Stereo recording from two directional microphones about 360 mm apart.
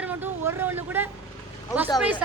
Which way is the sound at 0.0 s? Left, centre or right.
Centre.